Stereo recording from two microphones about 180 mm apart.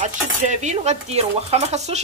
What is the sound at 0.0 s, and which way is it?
Dishes, 40° right (ahead or behind).